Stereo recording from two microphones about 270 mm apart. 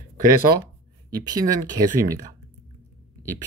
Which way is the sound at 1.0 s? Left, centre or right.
Centre.